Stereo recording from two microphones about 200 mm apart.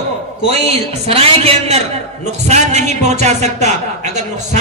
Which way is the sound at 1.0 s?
30° right (ahead or behind).